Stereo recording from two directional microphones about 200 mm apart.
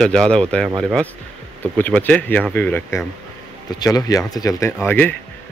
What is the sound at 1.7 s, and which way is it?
Speech, 10° left (ahead or behind).